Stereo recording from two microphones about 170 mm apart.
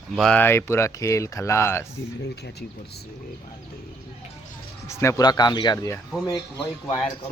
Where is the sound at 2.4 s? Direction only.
75° left (ahead or behind).